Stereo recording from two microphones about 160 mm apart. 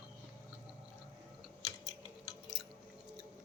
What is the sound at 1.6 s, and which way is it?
Typing, 25° left (ahead or behind).